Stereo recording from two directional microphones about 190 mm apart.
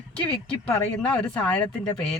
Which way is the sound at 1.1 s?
5° left (ahead or behind).